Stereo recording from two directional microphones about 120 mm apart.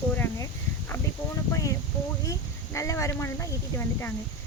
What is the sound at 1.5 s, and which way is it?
Speech, 30° left (ahead or behind).